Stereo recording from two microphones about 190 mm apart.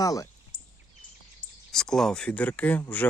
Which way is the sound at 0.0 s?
20° left (ahead or behind).